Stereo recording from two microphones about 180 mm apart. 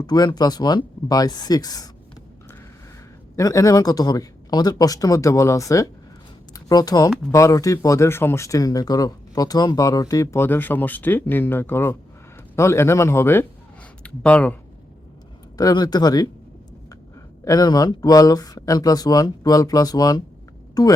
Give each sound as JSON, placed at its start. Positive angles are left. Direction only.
{"t": 0.0, "sound": "speech", "side_deg": 25}
{"t": 3.3, "sound": "speech", "side_deg": 20}
{"t": 15.5, "sound": "speech", "side_deg": 20}
{"t": 17.4, "sound": "speech", "side_deg": 20}